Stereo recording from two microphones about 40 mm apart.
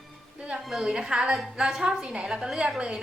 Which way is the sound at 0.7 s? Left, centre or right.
Centre.